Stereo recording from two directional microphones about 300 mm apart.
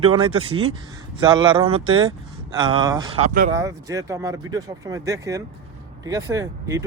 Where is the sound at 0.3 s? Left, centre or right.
Centre.